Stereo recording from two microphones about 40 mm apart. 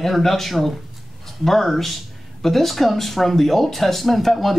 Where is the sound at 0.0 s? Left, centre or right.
Centre.